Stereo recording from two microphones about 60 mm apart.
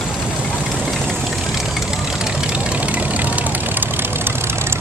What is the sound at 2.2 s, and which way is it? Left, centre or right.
Vehicle, centre.